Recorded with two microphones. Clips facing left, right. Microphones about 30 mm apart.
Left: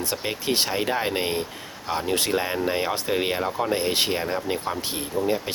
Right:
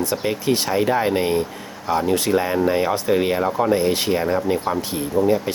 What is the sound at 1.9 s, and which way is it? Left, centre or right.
Speech, left.